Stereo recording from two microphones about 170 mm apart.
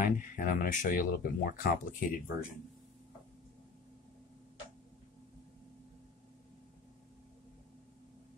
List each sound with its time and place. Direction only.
0.0 s speech: 50° left (ahead or behind)